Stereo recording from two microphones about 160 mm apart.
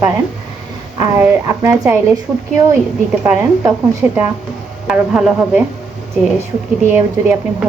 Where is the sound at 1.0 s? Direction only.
20° right (ahead or behind).